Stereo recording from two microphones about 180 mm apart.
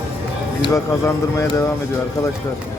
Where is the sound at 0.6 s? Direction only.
15° left (ahead or behind).